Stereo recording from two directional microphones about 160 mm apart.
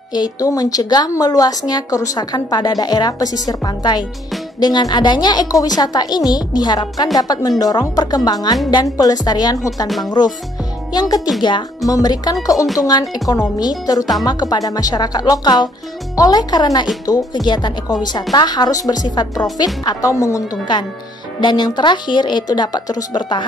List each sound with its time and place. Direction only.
0.1 s a woman's voice: 25° left (ahead or behind)
9.8 s speech: centre (ahead or behind)
10.9 s a woman's voice: 25° left (ahead or behind)